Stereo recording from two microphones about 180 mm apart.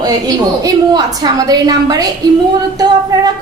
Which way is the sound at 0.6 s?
20° right (ahead or behind).